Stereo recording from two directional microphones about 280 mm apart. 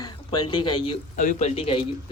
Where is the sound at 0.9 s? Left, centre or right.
Left.